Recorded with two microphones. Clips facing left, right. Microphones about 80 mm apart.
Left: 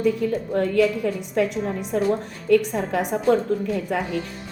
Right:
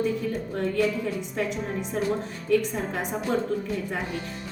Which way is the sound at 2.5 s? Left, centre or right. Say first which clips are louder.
Left 5 dB; left.